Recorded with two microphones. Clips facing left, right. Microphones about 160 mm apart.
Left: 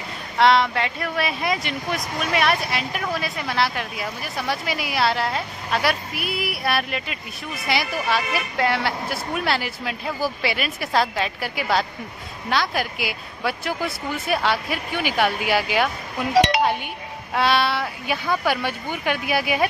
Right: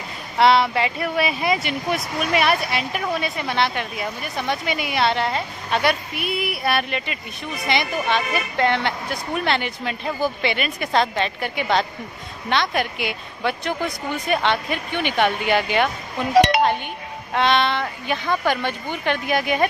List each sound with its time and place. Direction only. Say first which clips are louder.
0.4 s speech: right 1 dB; centre (ahead or behind)
16.3 s chink: right 2 dB; 55° right (ahead or behind)
16.6 s speech: right 2 dB; 5° left (ahead or behind)